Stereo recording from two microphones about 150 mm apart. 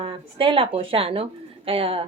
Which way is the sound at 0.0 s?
35° right (ahead or behind).